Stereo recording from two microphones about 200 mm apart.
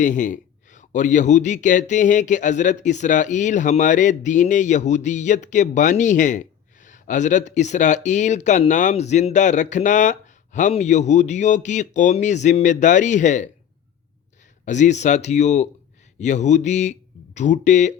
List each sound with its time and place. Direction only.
0.0 s speech: 40° left (ahead or behind)
14.6 s speech: 35° left (ahead or behind)